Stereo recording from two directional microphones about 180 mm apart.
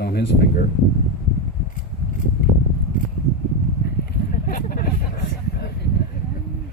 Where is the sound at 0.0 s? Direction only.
60° left (ahead or behind).